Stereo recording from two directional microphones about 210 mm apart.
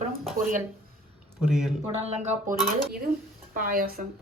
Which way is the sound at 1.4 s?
5° right (ahead or behind).